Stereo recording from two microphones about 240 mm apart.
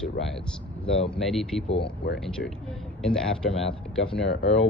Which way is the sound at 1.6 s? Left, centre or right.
Left.